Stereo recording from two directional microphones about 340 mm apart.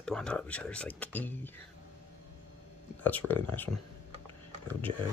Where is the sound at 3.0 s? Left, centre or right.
Centre.